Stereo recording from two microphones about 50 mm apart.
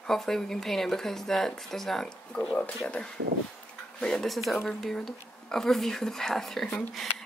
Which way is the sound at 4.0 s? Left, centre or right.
Centre.